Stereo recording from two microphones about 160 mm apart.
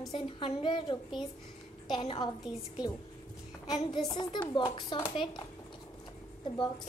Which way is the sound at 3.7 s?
25° left (ahead or behind).